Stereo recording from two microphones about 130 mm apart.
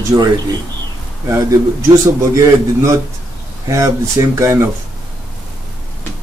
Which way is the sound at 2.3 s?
25° right (ahead or behind).